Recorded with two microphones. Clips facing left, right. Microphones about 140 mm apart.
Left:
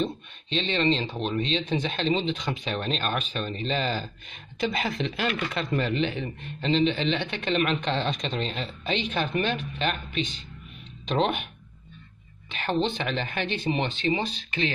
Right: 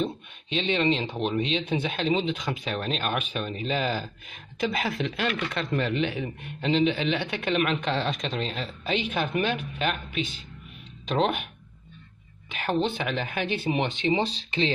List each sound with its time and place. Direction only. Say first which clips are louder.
0.0 s speech: even; 10° right (ahead or behind)
12.4 s speech: even; 5° right (ahead or behind)
14.2 s speech: right 2 dB; 30° right (ahead or behind)